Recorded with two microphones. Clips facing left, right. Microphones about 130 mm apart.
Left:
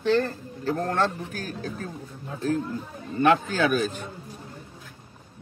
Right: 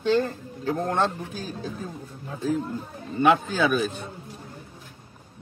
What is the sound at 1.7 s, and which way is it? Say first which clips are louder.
A man's voice: even; 5° right (ahead or behind).